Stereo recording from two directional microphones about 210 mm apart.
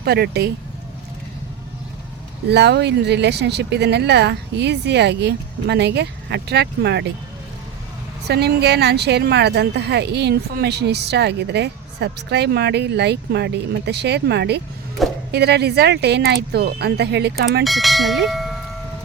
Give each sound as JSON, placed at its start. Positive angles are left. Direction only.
{"t": 0.0, "sound": "speech", "side_deg": -50}
{"t": 2.5, "sound": "speech", "side_deg": -50}
{"t": 8.3, "sound": "speech", "side_deg": -50}
{"t": 17.6, "sound": "bell", "side_deg": 0}